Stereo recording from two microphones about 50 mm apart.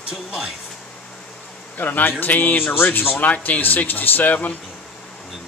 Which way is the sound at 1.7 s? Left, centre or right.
Left.